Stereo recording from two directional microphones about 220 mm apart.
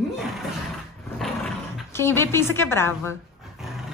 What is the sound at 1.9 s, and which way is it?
Speech, 10° left (ahead or behind).